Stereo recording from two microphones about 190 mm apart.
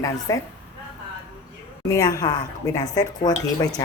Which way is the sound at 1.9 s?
20° left (ahead or behind).